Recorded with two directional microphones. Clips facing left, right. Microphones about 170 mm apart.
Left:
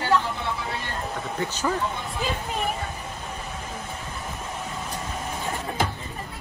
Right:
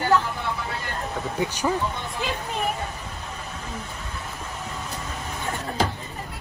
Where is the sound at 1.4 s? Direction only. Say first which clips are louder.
Right 2 dB; 15° right (ahead or behind).